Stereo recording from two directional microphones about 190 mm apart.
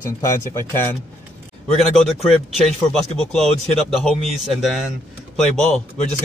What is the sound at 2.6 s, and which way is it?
A man's voice, centre (ahead or behind).